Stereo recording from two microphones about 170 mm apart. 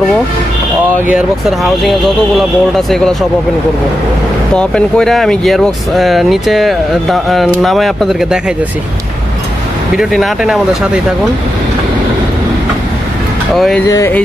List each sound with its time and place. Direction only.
1.1 s speech: centre (ahead or behind)
4.6 s speech: 5° left (ahead or behind)
9.9 s speech: centre (ahead or behind)
13.8 s speech: 20° left (ahead or behind)